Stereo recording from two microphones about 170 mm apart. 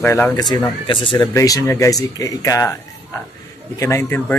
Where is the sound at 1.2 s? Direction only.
20° left (ahead or behind).